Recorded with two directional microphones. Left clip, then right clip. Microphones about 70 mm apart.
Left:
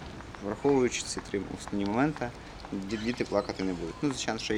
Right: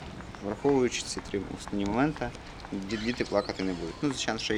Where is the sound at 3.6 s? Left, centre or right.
Right.